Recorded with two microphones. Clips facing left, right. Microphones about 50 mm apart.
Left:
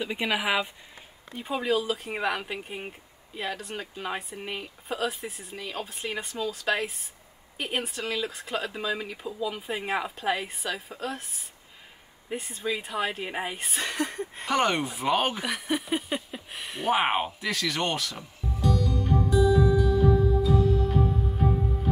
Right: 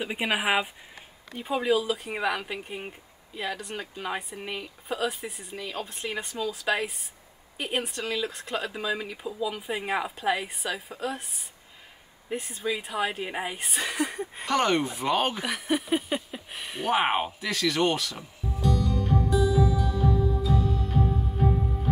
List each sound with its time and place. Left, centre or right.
0.0 s speech: centre
1.3 s speech: centre
14.5 s a sound: centre